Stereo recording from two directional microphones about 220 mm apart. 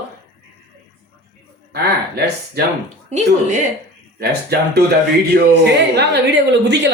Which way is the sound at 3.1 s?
35° right (ahead or behind).